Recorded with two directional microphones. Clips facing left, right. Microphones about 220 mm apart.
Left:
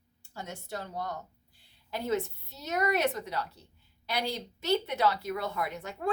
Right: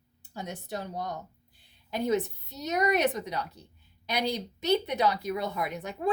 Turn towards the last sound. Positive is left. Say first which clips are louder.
# right 3 dB
turn(degrees=-15)  # may be behind; listen again after turning